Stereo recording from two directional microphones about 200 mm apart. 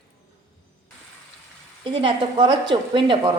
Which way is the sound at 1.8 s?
25° right (ahead or behind).